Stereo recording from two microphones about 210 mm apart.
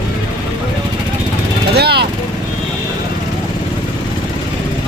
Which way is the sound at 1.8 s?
50° right (ahead or behind).